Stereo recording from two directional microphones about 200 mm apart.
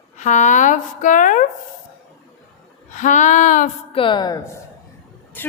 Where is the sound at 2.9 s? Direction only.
40° left (ahead or behind).